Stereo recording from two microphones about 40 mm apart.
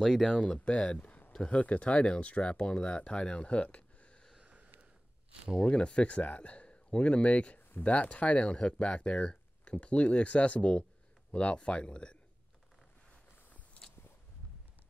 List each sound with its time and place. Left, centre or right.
0.0 s speech: centre
0.3 s speech: left
4.5 s a sound: right
5.6 s speech: left